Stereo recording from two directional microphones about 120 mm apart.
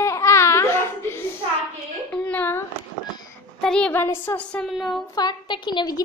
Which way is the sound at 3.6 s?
5° left (ahead or behind).